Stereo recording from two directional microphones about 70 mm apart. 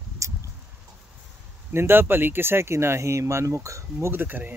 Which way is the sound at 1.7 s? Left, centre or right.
Right.